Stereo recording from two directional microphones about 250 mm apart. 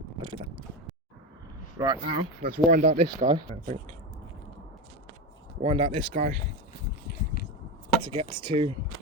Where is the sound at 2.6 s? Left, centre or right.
Right.